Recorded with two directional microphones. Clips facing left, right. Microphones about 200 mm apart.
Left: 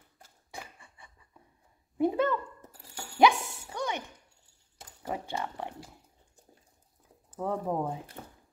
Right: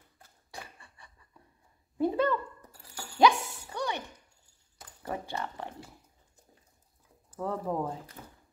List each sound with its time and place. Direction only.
0.7 s a sound: 20° left (ahead or behind)
5.0 s speech: 15° left (ahead or behind)
7.3 s speech: 15° left (ahead or behind)